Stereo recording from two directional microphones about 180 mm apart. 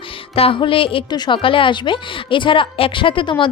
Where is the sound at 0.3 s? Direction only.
30° left (ahead or behind).